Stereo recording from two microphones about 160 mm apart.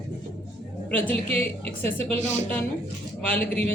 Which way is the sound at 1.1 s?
40° right (ahead or behind).